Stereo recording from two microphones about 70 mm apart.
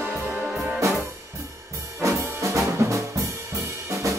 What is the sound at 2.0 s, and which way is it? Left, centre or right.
Music, right.